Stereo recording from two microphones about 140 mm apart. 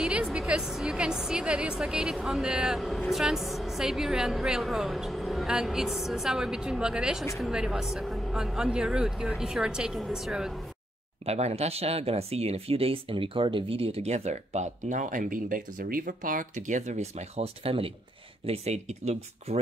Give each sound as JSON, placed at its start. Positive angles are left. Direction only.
{"t": 0.0, "sound": "a woman's voice", "side_deg": -5}
{"t": 11.2, "sound": "speech", "side_deg": -50}